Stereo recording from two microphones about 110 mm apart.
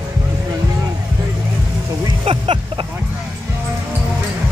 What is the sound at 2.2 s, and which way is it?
Vehicle, 55° right (ahead or behind).